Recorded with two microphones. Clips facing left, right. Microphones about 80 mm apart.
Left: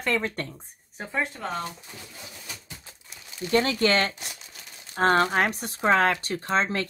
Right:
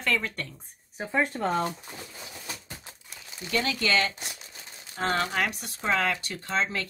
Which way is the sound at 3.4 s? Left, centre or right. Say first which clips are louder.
Left 6 dB; left.